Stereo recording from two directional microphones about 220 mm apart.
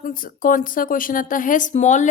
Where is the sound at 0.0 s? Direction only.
40° left (ahead or behind).